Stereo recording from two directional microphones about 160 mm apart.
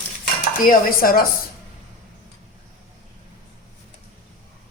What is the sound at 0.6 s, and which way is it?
Dishes, 65° left (ahead or behind).